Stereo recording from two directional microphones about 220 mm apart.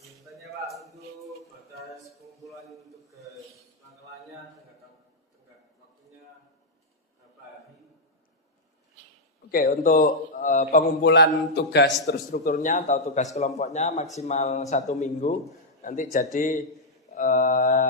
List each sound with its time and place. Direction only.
0.4 s music: centre (ahead or behind)
2.4 s a sound: centre (ahead or behind)
9.5 s a man's voice: 40° left (ahead or behind)
11.1 s a man's voice: 50° left (ahead or behind)
12.3 s a man's voice: 35° left (ahead or behind)